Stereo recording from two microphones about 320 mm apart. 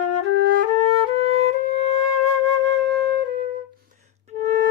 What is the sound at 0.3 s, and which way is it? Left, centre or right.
Music, right.